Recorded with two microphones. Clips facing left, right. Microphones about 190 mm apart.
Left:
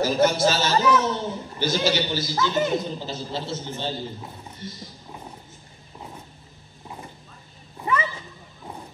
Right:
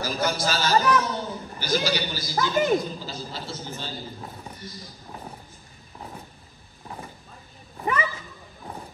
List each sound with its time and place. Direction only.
0.0 s a man's voice: 25° left (ahead or behind)